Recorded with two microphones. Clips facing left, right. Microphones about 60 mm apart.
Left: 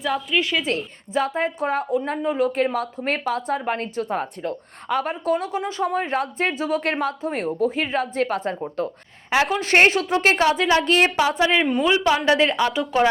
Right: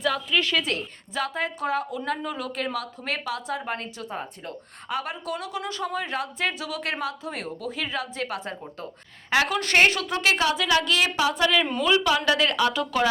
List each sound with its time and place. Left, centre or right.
0.0 s a woman's voice: centre
1.1 s a woman's voice: left
9.3 s a woman's voice: left
11.3 s speech: left